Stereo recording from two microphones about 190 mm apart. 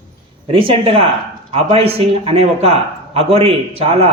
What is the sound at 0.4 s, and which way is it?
A man's voice, 30° right (ahead or behind).